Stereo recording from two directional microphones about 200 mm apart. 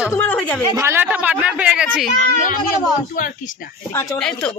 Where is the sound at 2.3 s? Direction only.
40° left (ahead or behind).